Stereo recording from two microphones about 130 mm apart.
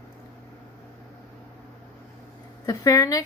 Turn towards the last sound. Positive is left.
turn(degrees=30)  # may be behind; listen again after turning